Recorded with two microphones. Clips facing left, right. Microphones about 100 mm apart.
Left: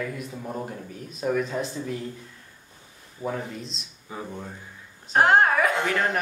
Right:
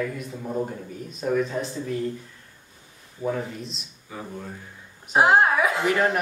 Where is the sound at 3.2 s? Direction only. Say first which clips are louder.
Right 3 dB; 5° right (ahead or behind).